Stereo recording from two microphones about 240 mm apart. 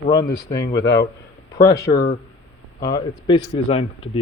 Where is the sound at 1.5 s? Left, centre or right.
Centre.